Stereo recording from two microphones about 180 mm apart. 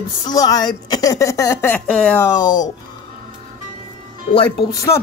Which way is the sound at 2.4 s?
20° left (ahead or behind).